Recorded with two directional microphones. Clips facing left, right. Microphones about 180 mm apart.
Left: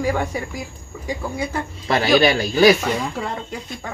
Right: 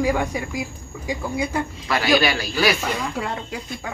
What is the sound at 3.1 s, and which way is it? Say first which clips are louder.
Speech: even; 5° right (ahead or behind).